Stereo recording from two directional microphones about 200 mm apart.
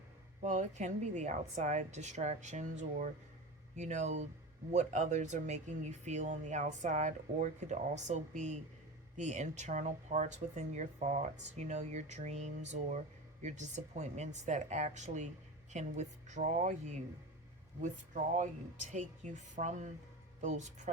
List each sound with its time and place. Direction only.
0.4 s speech: 35° right (ahead or behind)